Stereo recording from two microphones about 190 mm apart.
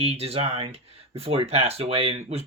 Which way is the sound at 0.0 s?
30° right (ahead or behind).